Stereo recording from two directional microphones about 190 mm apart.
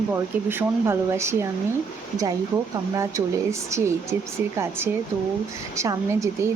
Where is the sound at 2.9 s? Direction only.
15° right (ahead or behind).